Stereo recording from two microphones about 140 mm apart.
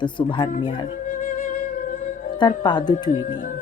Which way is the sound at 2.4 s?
35° left (ahead or behind).